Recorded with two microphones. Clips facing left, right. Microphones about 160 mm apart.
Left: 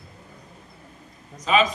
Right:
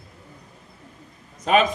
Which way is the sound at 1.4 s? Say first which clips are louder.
Right 2 dB; 55° right (ahead or behind).